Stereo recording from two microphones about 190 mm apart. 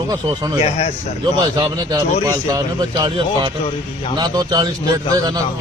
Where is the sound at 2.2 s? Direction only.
20° right (ahead or behind).